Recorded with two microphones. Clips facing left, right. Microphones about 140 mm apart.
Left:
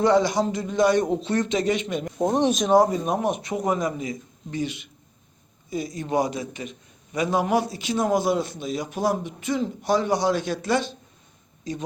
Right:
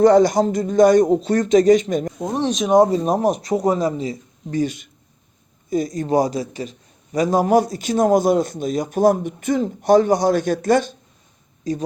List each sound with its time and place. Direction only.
0.0 s speech: 45° right (ahead or behind)
2.1 s speech: 20° left (ahead or behind)
2.6 s speech: 20° right (ahead or behind)
2.9 s a man's voice: 35° right (ahead or behind)